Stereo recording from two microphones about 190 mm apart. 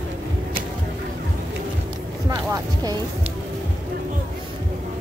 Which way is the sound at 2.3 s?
20° right (ahead or behind).